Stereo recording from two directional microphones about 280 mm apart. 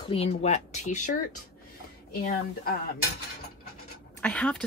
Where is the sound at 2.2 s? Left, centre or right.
Left.